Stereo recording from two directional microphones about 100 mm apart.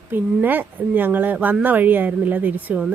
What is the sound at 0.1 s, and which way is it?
Speech, 20° right (ahead or behind).